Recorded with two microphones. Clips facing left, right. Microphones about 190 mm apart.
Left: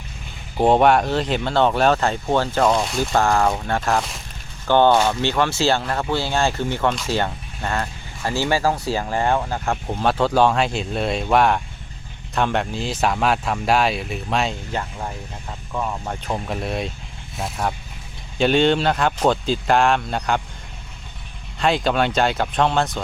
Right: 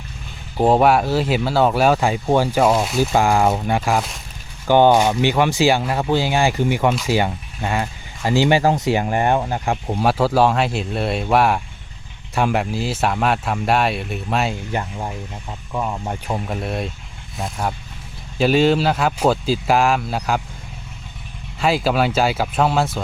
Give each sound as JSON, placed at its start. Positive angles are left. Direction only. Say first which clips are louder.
{"t": 0.5, "sound": "speech", "louder": "right 1 dB", "side_deg": 0}
{"t": 14.7, "sound": "speech", "louder": "right 2 dB", "side_deg": -15}
{"t": 21.6, "sound": "speech", "louder": "right 1 dB", "side_deg": -5}